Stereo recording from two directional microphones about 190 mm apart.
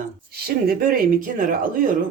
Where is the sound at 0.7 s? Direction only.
50° right (ahead or behind).